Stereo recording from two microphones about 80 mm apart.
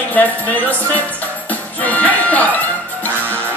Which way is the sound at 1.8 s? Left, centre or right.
Centre.